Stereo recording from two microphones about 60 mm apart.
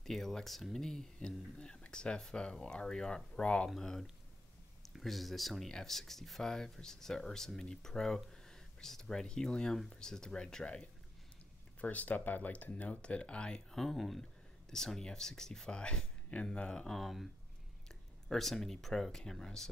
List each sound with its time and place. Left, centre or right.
0.0 s speech: centre
13.7 s speech: centre
16.8 s speech: centre
18.3 s speech: centre